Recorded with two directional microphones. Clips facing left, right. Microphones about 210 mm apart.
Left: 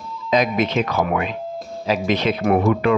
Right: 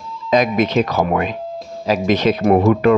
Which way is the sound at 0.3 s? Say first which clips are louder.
Right 3 dB; 45° right (ahead or behind).